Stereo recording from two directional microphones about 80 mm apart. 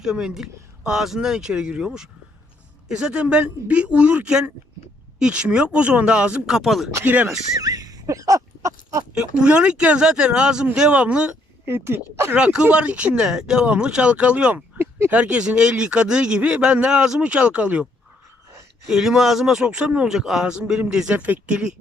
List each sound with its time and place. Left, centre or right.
0.0 s speech: centre
7.0 s speech: centre
7.6 s a sound: right
9.1 s speech: centre
11.6 s speech: right
12.4 s speech: centre
14.8 s a sound: right
15.1 s speech: centre
18.9 s speech: centre